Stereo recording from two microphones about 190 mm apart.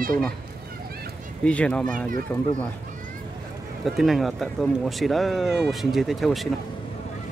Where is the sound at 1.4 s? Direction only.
5° left (ahead or behind).